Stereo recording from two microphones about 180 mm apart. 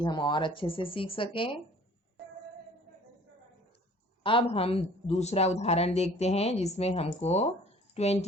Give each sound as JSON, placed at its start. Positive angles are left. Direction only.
{"t": 0.0, "sound": "speech", "side_deg": 25}
{"t": 4.2, "sound": "a woman's voice", "side_deg": 30}